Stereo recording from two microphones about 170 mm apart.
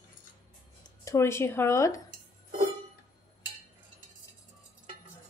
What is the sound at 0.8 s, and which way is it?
Speech, 15° left (ahead or behind).